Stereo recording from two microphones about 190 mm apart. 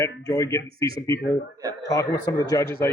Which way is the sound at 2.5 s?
15° left (ahead or behind).